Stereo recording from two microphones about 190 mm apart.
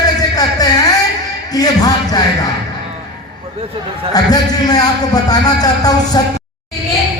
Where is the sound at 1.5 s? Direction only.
20° left (ahead or behind).